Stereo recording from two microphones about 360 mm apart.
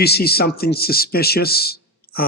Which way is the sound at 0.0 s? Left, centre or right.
Left.